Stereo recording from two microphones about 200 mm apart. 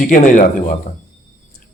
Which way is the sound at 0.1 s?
45° left (ahead or behind).